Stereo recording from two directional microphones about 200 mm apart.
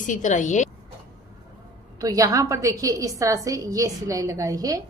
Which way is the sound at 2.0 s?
15° right (ahead or behind).